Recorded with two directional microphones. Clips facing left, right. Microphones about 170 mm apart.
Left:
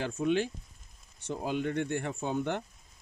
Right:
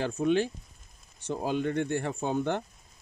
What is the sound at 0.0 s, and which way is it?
Speech, 35° right (ahead or behind).